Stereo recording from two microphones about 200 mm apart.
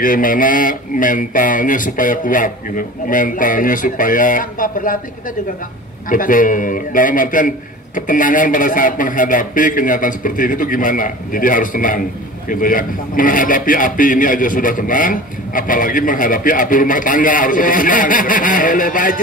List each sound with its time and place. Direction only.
0.0 s a man's voice: 45° left (ahead or behind)
6.0 s a man's voice: 40° left (ahead or behind)